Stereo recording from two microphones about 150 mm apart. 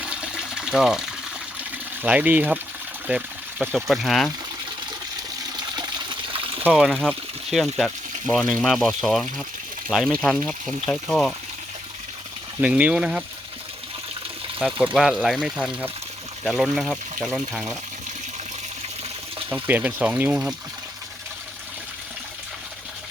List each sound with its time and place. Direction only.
0.0 s water: 5° right (ahead or behind)
2.0 s speech: 10° right (ahead or behind)
5.5 s water: 30° right (ahead or behind)
6.7 s speech: centre (ahead or behind)
12.6 s speech: 10° right (ahead or behind)
14.6 s speech: 10° right (ahead or behind)
19.5 s speech: 10° right (ahead or behind)